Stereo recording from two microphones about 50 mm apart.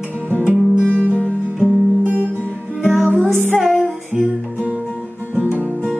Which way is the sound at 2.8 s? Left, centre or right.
Centre.